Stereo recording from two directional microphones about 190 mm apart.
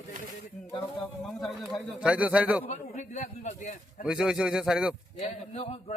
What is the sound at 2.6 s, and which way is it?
A man's voice, 35° left (ahead or behind).